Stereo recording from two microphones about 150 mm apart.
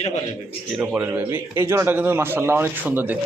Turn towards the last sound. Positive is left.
turn(degrees=-10)  # may be behind; listen again after turning